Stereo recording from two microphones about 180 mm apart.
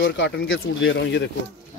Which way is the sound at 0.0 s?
85° left.